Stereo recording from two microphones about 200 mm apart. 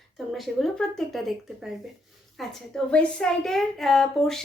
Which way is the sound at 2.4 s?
Centre (ahead or behind).